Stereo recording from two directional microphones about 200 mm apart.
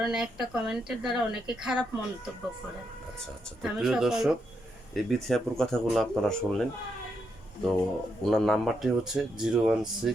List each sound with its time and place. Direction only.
0.0 s a woman's voice: 5° right (ahead or behind)
3.6 s a woman's voice: centre (ahead or behind)
7.6 s a woman's voice: centre (ahead or behind)